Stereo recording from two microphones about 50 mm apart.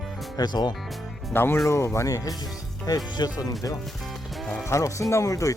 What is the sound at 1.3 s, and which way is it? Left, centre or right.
Speech, left.